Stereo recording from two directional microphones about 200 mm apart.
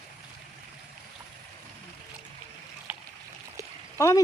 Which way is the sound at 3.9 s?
15° left (ahead or behind).